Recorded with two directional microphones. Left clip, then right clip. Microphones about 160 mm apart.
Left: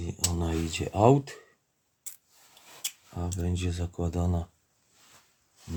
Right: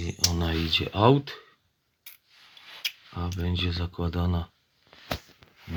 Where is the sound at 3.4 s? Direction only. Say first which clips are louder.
Right 6 dB; 10° left (ahead or behind).